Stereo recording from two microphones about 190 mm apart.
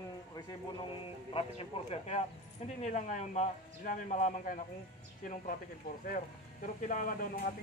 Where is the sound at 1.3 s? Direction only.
30° left (ahead or behind).